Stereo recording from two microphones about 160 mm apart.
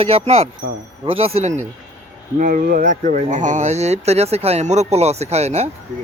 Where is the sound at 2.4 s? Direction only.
60° right (ahead or behind); by 5.7 s 45° right (ahead or behind).